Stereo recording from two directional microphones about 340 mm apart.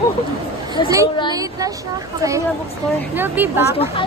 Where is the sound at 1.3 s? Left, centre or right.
Centre.